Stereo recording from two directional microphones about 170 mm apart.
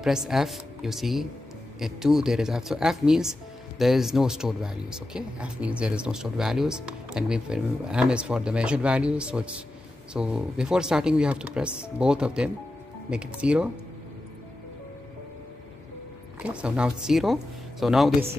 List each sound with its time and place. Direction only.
0.0 s speech: centre (ahead or behind)
16.4 s speech: 5° right (ahead or behind)